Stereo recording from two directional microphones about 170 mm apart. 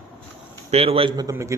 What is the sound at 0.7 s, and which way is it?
Speech, 35° right (ahead or behind).